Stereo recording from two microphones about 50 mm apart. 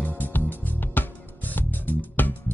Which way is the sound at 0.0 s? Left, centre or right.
Left.